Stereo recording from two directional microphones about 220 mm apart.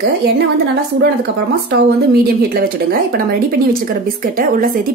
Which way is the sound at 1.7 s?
45° right (ahead or behind).